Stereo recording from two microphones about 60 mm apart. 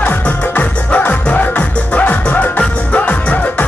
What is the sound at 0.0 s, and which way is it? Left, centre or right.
Music, left.